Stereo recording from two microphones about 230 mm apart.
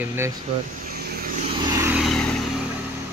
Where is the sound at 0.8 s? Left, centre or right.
Right.